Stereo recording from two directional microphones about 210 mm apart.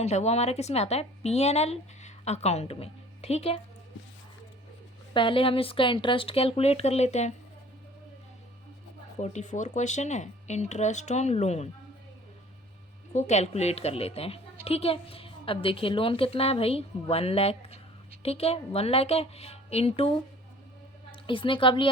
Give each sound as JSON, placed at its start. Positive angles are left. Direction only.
{"t": 0.0, "sound": "a woman's voice", "side_deg": 30}
{"t": 5.1, "sound": "a woman's voice", "side_deg": 25}
{"t": 9.1, "sound": "a woman's voice", "side_deg": 35}
{"t": 13.1, "sound": "a woman's voice", "side_deg": 35}